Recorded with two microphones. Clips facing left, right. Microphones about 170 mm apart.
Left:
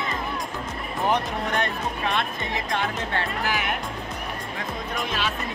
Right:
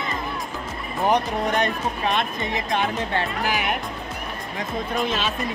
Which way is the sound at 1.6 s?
20° right (ahead or behind).